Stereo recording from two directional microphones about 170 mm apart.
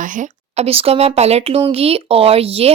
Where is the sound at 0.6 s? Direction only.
35° right (ahead or behind).